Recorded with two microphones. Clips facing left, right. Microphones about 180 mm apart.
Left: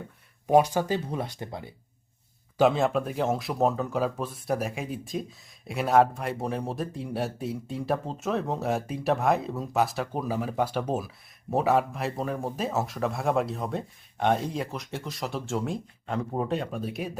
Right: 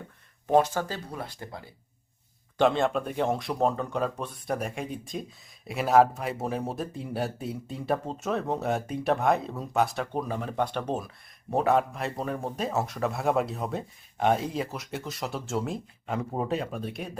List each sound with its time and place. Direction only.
0.4 s speech: 15° left (ahead or behind)
2.6 s speech: centre (ahead or behind)